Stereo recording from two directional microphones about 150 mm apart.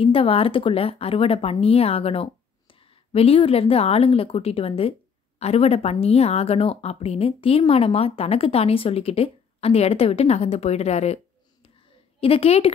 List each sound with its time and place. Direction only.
0.0 s a woman's voice: 40° left (ahead or behind)
12.2 s speech: 40° left (ahead or behind)